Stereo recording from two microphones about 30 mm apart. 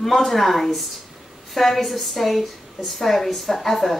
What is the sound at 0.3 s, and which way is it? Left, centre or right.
A woman's voice, centre.